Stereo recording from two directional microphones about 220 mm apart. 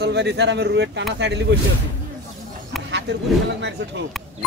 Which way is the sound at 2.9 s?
50° right (ahead or behind).